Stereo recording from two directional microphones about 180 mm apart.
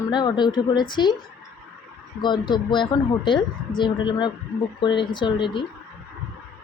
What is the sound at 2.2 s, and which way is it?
Speech, 25° left (ahead or behind).